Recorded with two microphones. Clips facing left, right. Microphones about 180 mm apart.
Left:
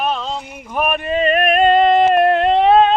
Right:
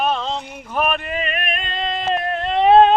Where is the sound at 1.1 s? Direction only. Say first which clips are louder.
Left 10 dB; 35° left (ahead or behind); by 2.5 s 70° left (ahead or behind).